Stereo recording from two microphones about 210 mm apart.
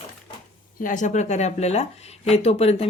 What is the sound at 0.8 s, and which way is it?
Speech, 35° left (ahead or behind).